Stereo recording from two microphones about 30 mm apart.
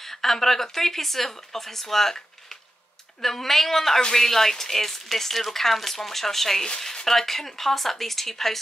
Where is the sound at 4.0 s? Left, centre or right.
Left.